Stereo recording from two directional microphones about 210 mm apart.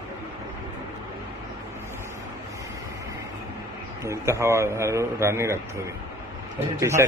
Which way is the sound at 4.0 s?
15° right (ahead or behind).